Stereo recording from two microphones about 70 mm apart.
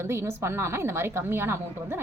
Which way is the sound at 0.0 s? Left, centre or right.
Right.